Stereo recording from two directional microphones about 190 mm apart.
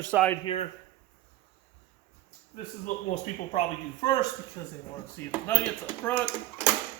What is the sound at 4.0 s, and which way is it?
A man's voice, 20° left (ahead or behind).